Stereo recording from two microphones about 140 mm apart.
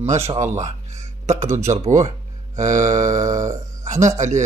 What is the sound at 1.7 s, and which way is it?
Speech, 50° right (ahead or behind).